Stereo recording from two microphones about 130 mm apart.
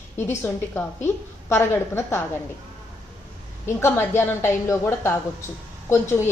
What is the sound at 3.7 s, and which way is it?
A woman's voice, 20° left (ahead or behind).